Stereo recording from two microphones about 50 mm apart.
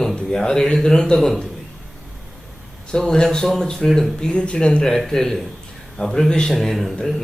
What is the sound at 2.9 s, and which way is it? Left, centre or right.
Speech, centre.